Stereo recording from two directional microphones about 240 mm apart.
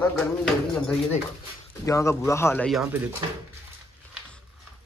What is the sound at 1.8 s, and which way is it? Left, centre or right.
Speech, centre.